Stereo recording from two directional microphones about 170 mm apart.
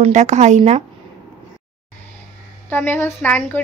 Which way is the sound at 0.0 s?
45° right (ahead or behind).